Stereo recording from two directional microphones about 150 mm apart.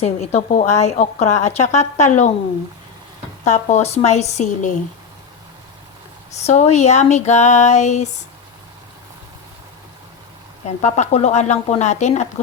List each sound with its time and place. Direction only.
0.0 s a woman's voice: 45° left (ahead or behind)
3.4 s a woman's voice: 50° left (ahead or behind)
6.3 s a woman's voice: 50° left (ahead or behind)
10.8 s a woman's voice: 50° left (ahead or behind)